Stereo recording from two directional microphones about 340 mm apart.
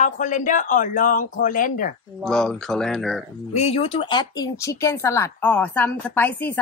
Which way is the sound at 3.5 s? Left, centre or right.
Centre.